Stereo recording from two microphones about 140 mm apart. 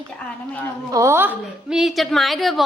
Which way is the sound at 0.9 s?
25° right (ahead or behind).